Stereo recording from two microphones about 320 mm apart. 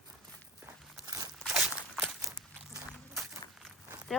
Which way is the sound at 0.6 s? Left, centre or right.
Centre.